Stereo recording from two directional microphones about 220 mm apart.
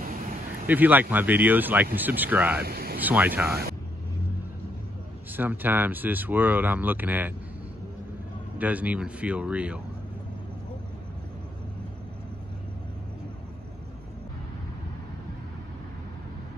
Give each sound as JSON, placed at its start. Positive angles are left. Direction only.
{"t": 0.7, "sound": "speech", "side_deg": -10}
{"t": 2.6, "sound": "a sound", "side_deg": -45}
{"t": 3.0, "sound": "speech", "side_deg": -10}
{"t": 5.3, "sound": "speech", "side_deg": -10}
{"t": 8.5, "sound": "speech", "side_deg": -5}